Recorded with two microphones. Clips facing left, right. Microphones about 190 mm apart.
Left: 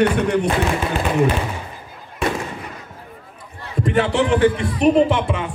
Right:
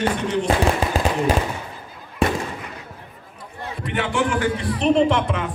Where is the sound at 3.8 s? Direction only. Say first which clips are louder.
Left 5 dB; 40° left (ahead or behind).